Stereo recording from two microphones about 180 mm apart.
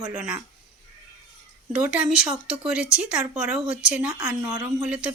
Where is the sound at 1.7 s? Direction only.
5° right (ahead or behind).